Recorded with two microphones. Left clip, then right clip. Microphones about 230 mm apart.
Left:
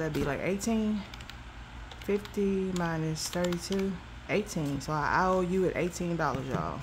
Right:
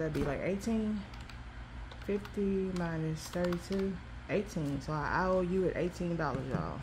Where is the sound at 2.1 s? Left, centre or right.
Centre.